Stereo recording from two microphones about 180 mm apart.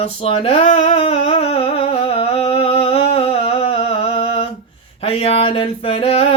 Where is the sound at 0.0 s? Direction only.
30° left (ahead or behind).